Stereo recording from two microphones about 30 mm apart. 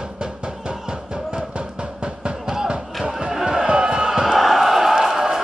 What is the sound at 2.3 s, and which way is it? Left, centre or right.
Music, centre.